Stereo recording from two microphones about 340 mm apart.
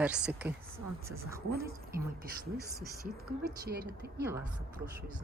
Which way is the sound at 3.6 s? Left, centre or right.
Right.